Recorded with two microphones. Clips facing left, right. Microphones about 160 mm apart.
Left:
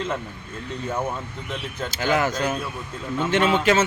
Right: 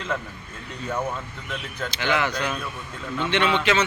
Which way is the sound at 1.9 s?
40° left (ahead or behind).